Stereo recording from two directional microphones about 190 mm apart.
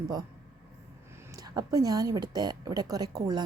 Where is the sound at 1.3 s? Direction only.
20° right (ahead or behind).